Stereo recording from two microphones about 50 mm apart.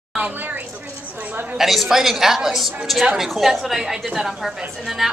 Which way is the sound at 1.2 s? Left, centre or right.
Right.